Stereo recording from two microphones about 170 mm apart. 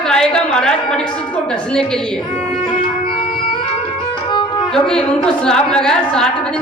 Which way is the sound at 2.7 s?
30° left (ahead or behind).